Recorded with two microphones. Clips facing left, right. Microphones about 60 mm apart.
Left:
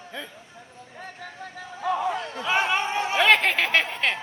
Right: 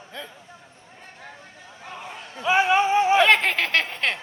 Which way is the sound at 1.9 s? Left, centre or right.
Left.